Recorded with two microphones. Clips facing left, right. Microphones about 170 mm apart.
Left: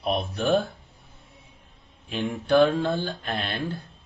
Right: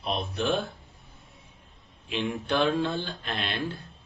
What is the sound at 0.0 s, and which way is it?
Speech, 45° left (ahead or behind).